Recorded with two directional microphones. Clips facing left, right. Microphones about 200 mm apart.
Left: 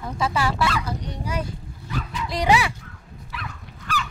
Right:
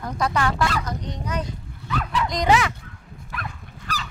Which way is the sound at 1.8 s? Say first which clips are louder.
Right 5 dB; 70° right (ahead or behind).